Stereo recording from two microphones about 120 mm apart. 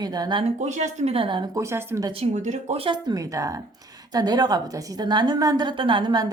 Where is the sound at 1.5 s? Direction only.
25° right (ahead or behind).